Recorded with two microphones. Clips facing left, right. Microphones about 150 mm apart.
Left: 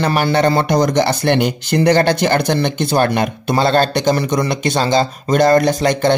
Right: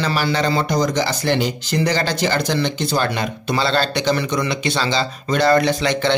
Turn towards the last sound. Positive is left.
turn(degrees=45)  # may be behind; listen again after turning